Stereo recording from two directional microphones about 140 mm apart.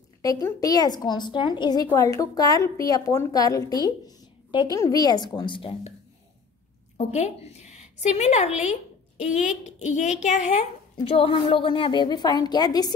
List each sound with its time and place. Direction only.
0.2 s a woman's voice: 25° left (ahead or behind)
7.0 s a woman's voice: 55° left (ahead or behind)
11.1 s a woman's voice: 45° left (ahead or behind)